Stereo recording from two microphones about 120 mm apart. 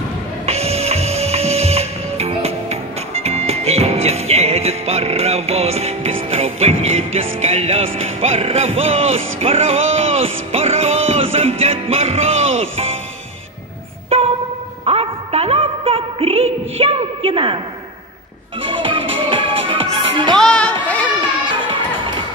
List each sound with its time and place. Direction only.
0.5 s music: 60° right (ahead or behind)
14.0 s a sound: 60° right (ahead or behind)
14.9 s music: 55° right (ahead or behind)
18.6 s music: 45° right (ahead or behind)
20.3 s speech: 5° left (ahead or behind)
20.8 s a sound: 10° left (ahead or behind)